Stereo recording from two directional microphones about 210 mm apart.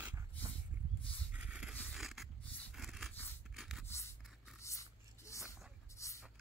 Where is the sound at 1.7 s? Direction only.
Centre (ahead or behind).